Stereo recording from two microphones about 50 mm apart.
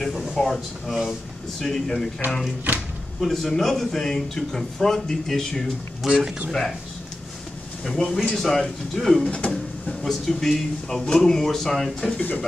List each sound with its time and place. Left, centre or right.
0.0 s speech: centre
6.0 s speech: centre
7.8 s speech: centre
9.2 s speech: left
10.0 s speech: centre